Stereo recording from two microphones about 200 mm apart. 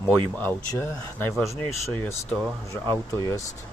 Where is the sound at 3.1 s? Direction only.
15° left (ahead or behind).